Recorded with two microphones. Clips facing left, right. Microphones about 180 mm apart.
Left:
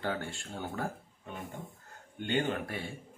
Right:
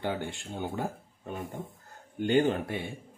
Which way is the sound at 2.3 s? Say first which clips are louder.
Right 6 dB; 35° right (ahead or behind).